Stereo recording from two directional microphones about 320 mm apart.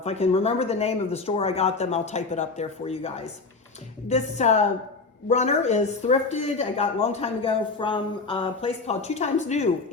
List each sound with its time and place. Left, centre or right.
0.0 s speech: centre
4.1 s speech: left